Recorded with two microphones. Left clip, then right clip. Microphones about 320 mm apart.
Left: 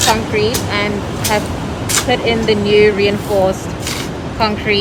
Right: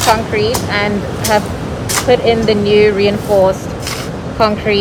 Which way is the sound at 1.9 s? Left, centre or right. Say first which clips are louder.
Right 4 dB; right.